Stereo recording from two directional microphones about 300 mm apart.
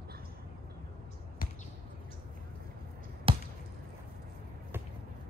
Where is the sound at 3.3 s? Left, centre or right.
Centre.